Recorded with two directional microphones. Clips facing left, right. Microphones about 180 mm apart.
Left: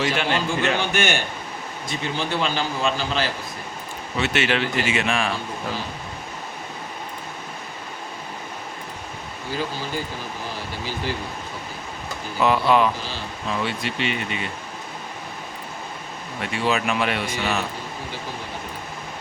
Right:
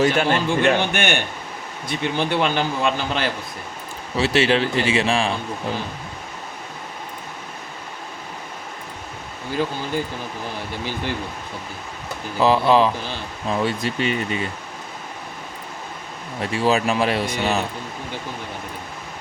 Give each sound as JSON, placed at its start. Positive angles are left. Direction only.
{"t": 0.0, "sound": "a man's voice", "side_deg": -45}
{"t": 4.2, "sound": "speech", "side_deg": -35}
{"t": 12.4, "sound": "speech", "side_deg": -30}
{"t": 16.4, "sound": "speech", "side_deg": -35}